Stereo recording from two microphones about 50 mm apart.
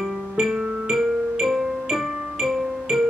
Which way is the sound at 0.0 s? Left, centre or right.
Centre.